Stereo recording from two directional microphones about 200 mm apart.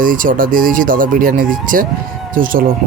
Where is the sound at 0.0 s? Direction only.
40° right (ahead or behind).